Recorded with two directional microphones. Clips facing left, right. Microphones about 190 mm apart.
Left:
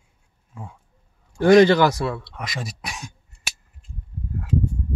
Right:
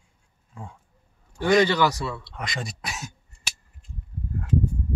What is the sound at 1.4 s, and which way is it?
Speech, 50° left (ahead or behind).